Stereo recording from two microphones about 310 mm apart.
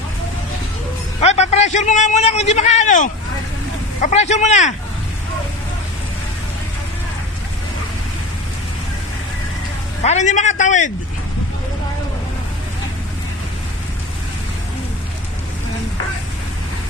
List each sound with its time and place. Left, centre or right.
1.2 s a man's voice: left
10.0 s a man's voice: left